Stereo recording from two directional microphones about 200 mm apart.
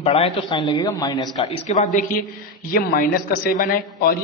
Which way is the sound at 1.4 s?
35° left (ahead or behind).